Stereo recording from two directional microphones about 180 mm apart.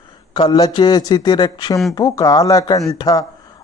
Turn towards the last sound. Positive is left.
turn(degrees=20)  # may be behind; listen again after turning